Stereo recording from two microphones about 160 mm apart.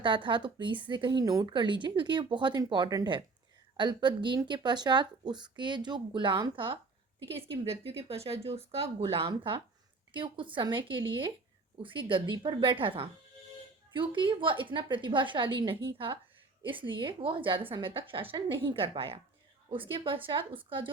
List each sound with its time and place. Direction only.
0.0 s a woman's voice: 30° right (ahead or behind)